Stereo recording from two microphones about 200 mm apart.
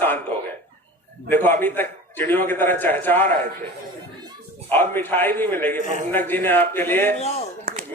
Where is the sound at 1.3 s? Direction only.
10° left (ahead or behind).